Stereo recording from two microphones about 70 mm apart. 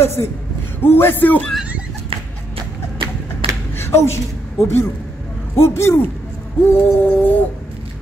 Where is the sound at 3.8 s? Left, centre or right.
Left.